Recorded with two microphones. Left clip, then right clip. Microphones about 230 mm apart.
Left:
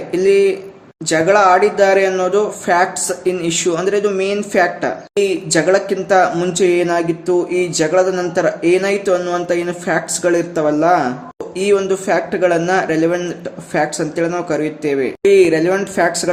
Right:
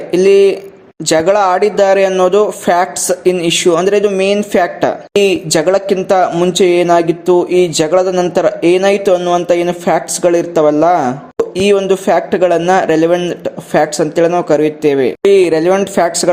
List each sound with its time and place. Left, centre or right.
0.1 s speech: right